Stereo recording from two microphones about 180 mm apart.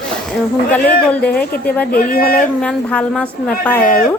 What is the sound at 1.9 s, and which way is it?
Speech, 55° left (ahead or behind).